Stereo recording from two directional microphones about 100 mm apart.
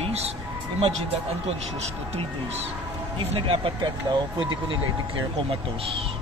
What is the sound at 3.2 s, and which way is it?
Speech, 65° right (ahead or behind).